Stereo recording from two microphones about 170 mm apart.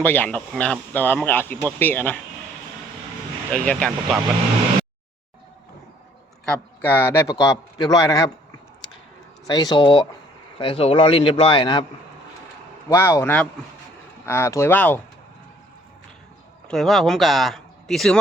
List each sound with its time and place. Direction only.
0.0 s speech: 10° left (ahead or behind)
3.5 s speech: 5° left (ahead or behind)
6.4 s a man's voice: 10° left (ahead or behind)
9.5 s a man's voice: 25° left (ahead or behind)
12.9 s speech: 15° left (ahead or behind)
16.6 s speech: centre (ahead or behind)